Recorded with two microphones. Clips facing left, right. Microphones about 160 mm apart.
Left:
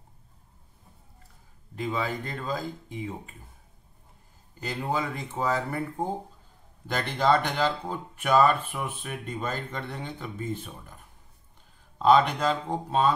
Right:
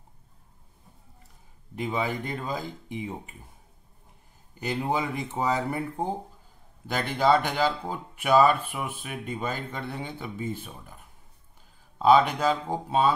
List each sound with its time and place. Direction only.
1.8 s speech: 20° right (ahead or behind)
4.6 s speech: 15° right (ahead or behind)
12.0 s speech: 5° right (ahead or behind)